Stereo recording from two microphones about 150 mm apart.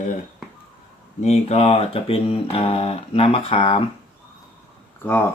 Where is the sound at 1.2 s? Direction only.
45° left (ahead or behind).